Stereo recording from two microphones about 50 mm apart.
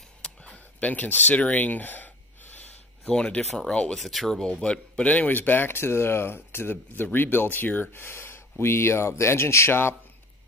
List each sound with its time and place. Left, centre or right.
0.2 s a sound: left
3.1 s speech: centre
3.9 s speech: centre
4.4 s speech: centre; by 9.7 s left
9.7 s speech: left